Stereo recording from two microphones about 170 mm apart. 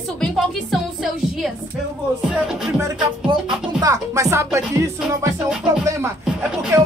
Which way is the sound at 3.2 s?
25° right (ahead or behind).